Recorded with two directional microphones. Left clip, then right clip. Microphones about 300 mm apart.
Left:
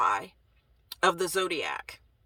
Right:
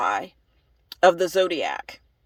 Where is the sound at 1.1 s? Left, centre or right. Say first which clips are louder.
Right 7 dB; left.